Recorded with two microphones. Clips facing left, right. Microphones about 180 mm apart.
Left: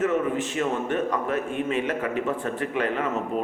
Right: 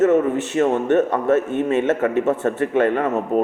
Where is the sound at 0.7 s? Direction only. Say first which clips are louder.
Right 8 dB; 75° right (ahead or behind).